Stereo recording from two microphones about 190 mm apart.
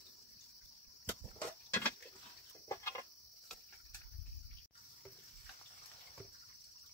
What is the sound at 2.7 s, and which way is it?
Cricket, 15° left (ahead or behind).